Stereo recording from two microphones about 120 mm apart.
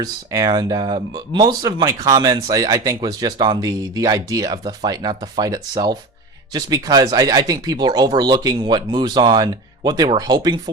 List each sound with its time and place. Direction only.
0.0 s speech: 30° right (ahead or behind)